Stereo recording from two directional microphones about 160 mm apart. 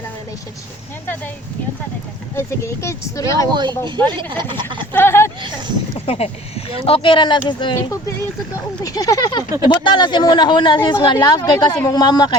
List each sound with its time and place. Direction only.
2.3 s speech: 15° left (ahead or behind)
3.5 s speech: 25° right (ahead or behind)
4.9 s speech: 15° left (ahead or behind)
5.4 s speech: 30° right (ahead or behind)
6.1 s speech: 40° left (ahead or behind)
8.8 s speech: 20° left (ahead or behind)